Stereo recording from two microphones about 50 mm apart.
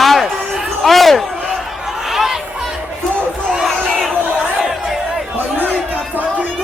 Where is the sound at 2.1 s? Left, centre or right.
Centre.